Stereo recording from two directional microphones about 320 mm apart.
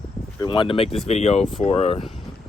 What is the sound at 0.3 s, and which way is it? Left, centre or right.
Speech, centre.